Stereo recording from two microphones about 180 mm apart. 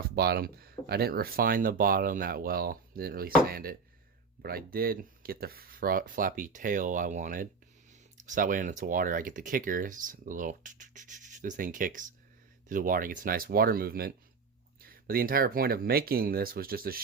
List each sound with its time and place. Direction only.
0.2 s speech: 60° right (ahead or behind)